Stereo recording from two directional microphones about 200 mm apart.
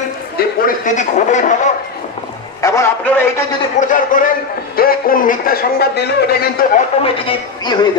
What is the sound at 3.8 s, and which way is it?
A man's voice, 40° left (ahead or behind).